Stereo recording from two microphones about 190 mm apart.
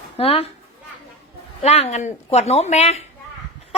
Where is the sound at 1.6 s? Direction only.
35° left (ahead or behind).